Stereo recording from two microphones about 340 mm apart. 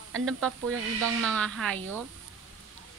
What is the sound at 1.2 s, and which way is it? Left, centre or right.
Speech, centre.